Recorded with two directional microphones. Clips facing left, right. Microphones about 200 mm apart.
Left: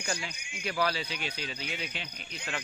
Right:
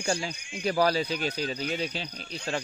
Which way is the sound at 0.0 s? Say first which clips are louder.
Right 7 dB; 30° right (ahead or behind).